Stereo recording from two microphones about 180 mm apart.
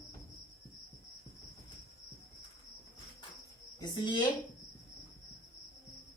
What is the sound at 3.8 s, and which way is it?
Speech, 25° left (ahead or behind).